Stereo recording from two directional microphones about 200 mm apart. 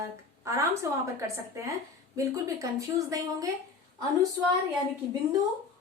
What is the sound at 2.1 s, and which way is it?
Speech, 15° right (ahead or behind).